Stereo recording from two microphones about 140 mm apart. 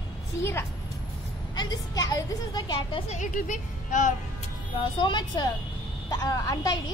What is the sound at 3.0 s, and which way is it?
A woman's voice, 60° left (ahead or behind).